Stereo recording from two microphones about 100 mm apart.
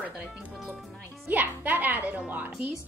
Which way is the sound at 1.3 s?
15° right (ahead or behind).